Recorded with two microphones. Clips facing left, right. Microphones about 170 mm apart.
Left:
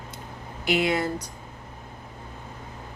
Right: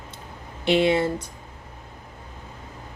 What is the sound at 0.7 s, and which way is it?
Speech, 30° right (ahead or behind).